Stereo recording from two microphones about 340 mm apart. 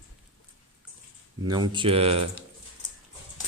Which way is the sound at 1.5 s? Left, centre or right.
Centre.